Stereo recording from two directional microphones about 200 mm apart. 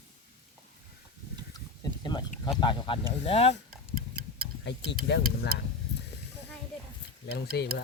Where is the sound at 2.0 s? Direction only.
20° left (ahead or behind).